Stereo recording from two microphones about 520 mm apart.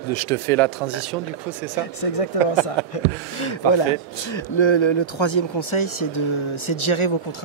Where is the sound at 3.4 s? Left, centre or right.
Left.